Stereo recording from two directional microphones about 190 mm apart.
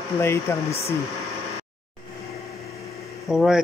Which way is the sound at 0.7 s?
35° left (ahead or behind).